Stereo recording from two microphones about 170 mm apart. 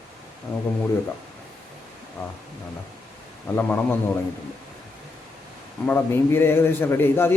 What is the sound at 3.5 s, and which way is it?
Speech, 10° left (ahead or behind).